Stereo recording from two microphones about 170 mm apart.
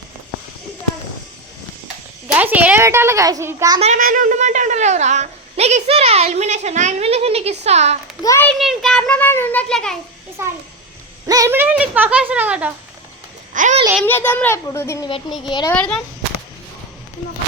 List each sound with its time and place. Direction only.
2.2 s a child's voice: 10° right (ahead or behind)
3.8 s a woman's voice: 40° right (ahead or behind)
4.0 s a woman's voice: 50° right (ahead or behind)
8.2 s a child's voice: 20° left (ahead or behind)
8.4 s a child's voice: centre (ahead or behind)
10.4 s speech: 15° right (ahead or behind)
13.5 s a child's voice: 50° right (ahead or behind)
14.0 s a child's voice: 10° left (ahead or behind)
15.7 s a child's voice: 5° left (ahead or behind)